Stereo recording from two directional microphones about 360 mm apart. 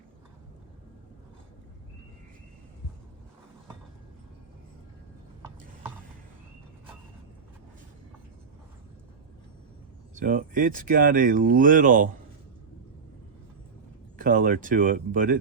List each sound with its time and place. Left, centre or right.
10.2 s speech: right
14.2 s speech: right